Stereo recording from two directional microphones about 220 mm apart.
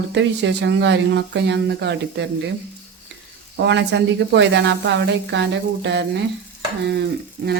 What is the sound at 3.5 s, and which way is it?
Speech, 50° right (ahead or behind).